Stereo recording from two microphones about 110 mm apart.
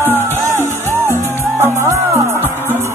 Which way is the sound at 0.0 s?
20° right (ahead or behind).